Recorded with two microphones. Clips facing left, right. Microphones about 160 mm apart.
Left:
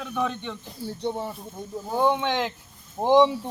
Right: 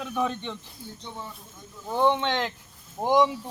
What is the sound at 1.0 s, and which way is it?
Speech, 60° left (ahead or behind).